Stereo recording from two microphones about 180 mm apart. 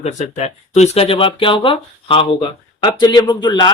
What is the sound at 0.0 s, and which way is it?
Speech, 40° left (ahead or behind).